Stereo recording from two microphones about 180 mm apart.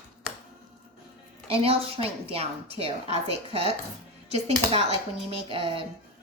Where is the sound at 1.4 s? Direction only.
35° right (ahead or behind).